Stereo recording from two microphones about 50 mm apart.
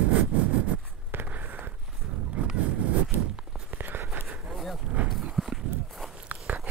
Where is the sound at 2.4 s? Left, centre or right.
Right.